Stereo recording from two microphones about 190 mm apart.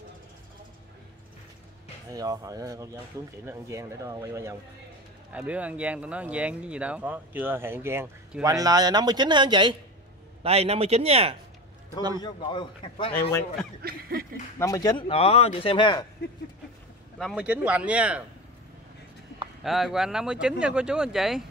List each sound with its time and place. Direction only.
2.0 s speech: 20° right (ahead or behind)
12.2 s speech: 25° left (ahead or behind)
13.1 s speech: 10° left (ahead or behind)
13.8 s a sound: 50° right (ahead or behind)
14.6 s speech: 20° left (ahead or behind)
17.2 s speech: centre (ahead or behind)
19.6 s speech: centre (ahead or behind)